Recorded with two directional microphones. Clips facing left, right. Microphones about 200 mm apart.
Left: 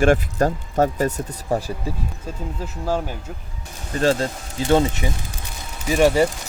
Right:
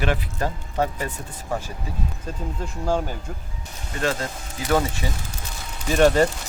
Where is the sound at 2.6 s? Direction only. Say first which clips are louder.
Even; 5° left (ahead or behind).